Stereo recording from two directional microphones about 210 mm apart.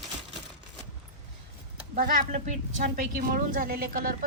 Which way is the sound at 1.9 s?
40° right (ahead or behind).